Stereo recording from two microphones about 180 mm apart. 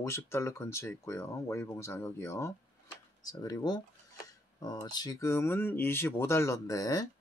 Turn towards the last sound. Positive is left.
turn(degrees=20)  # may be behind; listen again after turning